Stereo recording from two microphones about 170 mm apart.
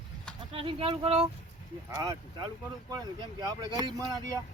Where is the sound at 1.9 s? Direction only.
20° right (ahead or behind).